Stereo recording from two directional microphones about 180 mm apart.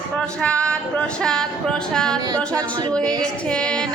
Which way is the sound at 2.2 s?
20° right (ahead or behind).